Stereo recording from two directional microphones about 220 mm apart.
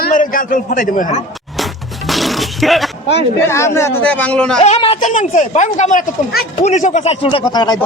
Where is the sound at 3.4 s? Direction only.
10° left (ahead or behind).